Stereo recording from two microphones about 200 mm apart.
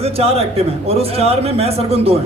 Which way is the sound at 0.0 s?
30° right (ahead or behind).